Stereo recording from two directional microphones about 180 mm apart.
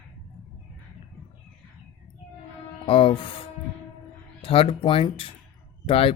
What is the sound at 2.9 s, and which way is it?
Speech, 30° left (ahead or behind).